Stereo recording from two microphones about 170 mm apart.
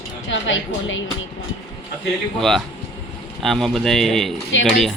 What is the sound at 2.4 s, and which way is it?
Speech, centre (ahead or behind).